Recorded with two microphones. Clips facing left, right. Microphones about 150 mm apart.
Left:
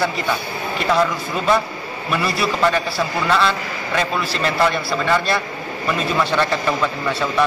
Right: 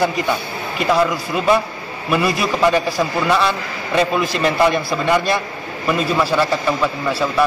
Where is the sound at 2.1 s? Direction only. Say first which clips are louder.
Right 3 dB; 10° right (ahead or behind).